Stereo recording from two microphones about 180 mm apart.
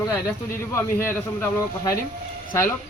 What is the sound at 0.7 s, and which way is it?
Speech, 10° left (ahead or behind).